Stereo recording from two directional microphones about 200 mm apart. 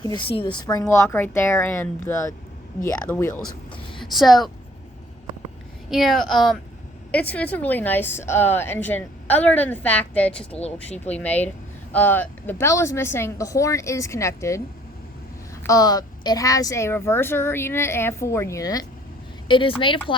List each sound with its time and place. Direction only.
0.0 s speech: 25° left (ahead or behind)
3.9 s speech: centre (ahead or behind)
5.9 s speech: centre (ahead or behind)
15.6 s a woman's voice: 20° left (ahead or behind)